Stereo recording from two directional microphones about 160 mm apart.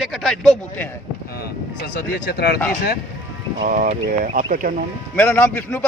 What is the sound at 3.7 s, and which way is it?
Speech, 55° right (ahead or behind).